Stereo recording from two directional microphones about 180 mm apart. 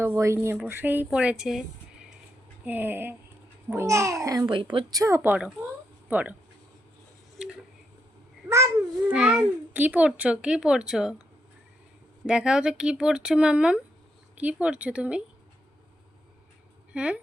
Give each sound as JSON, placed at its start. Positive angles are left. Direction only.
{"t": 0.0, "sound": "a child's voice", "side_deg": -15}
{"t": 2.6, "sound": "a child's voice", "side_deg": -10}
{"t": 8.4, "sound": "babbling", "side_deg": -15}
{"t": 9.1, "sound": "a child's voice", "side_deg": -5}
{"t": 12.2, "sound": "a child's voice", "side_deg": -5}
{"t": 16.9, "sound": "speech", "side_deg": -5}